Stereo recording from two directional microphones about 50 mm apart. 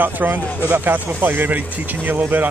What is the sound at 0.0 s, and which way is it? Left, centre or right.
Speech, right.